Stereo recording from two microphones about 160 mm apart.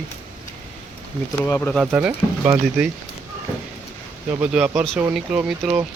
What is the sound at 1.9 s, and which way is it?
Speech, 15° right (ahead or behind).